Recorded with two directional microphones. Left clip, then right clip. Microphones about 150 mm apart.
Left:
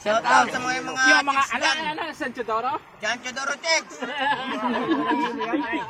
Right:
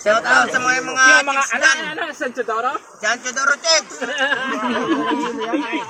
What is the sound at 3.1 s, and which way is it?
Speech, 20° left (ahead or behind).